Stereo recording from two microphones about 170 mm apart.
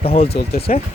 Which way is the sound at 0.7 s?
50° left (ahead or behind).